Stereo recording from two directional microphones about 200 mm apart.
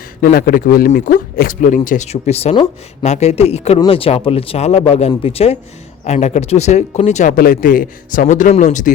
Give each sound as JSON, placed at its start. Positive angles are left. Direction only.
{"t": 0.2, "sound": "speech", "side_deg": 50}